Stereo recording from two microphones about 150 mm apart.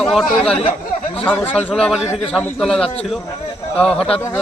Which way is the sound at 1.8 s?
5° right (ahead or behind).